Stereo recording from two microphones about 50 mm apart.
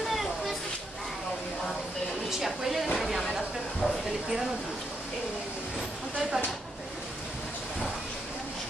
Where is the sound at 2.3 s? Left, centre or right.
Centre.